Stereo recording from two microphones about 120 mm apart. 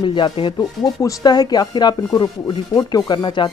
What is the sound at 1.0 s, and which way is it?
Speech, 30° left (ahead or behind).